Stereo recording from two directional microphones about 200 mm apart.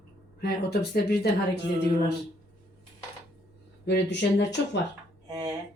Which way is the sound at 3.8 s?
60° left (ahead or behind).